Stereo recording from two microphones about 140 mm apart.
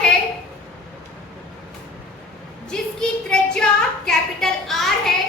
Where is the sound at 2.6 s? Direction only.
5° left (ahead or behind).